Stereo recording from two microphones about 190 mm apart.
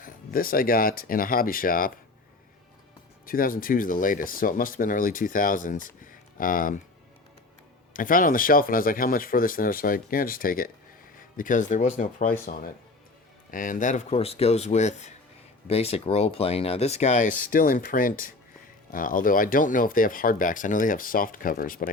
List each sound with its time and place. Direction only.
0.0 s speech: 50° left (ahead or behind)
3.2 s speech: 50° left (ahead or behind)
7.9 s speech: 45° left (ahead or behind)